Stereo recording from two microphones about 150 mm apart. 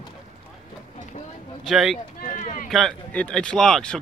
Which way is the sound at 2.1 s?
55° left (ahead or behind).